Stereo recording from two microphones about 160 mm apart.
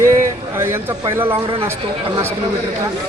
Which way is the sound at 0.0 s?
15° right (ahead or behind).